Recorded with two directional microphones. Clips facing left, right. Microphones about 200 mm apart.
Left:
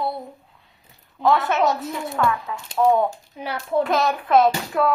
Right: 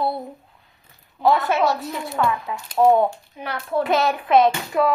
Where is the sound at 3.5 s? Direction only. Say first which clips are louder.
Left 1 dB; 15° left (ahead or behind).